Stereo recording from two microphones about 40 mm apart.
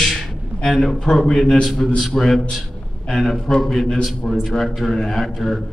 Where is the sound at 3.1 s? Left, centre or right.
Centre.